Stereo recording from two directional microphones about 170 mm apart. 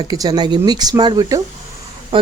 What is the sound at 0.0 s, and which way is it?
Speech, 25° right (ahead or behind).